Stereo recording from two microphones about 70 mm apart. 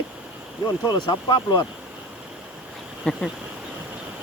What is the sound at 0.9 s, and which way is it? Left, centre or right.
Speech, left.